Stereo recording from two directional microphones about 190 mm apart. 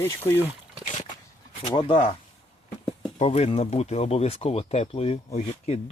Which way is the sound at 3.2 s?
35° left (ahead or behind).